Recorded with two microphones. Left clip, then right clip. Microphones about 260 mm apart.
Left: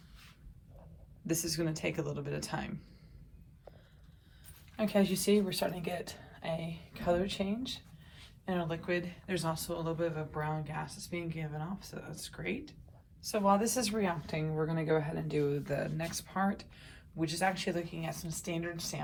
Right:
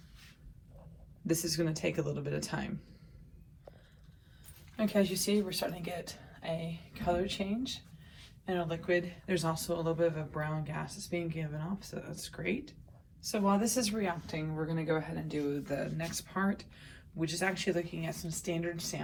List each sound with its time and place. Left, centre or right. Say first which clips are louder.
1.3 s speech: right 2 dB; centre
4.8 s speech: even; centre
5.1 s a woman's voice: left 2 dB; left; by 19.0 s centre